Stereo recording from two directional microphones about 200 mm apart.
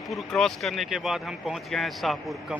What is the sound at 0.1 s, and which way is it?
Speech, centre (ahead or behind).